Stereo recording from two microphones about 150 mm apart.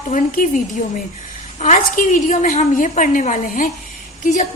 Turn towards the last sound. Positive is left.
turn(degrees=55)  # may be behind; listen again after turning